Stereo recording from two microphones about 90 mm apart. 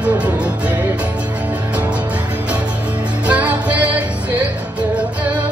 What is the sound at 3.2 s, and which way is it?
Music, 15° right (ahead or behind).